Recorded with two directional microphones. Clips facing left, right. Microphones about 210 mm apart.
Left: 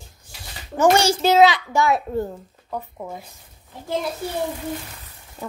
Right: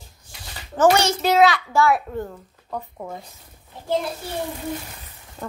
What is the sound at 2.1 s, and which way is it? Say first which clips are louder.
Speech: left 4 dB; 30° left (ahead or behind).